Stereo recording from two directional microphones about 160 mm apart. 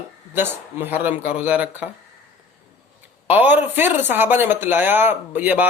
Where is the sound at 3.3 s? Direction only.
10° right (ahead or behind).